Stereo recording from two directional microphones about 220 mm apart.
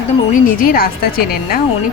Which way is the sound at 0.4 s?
40° left (ahead or behind).